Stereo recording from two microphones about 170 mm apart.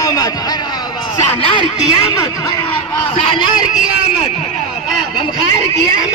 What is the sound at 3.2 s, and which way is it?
Speech, 30° left (ahead or behind).